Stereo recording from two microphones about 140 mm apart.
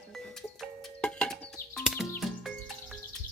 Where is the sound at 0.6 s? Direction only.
5° left (ahead or behind).